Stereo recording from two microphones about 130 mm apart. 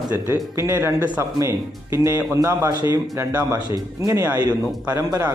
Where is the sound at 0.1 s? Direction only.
25° right (ahead or behind).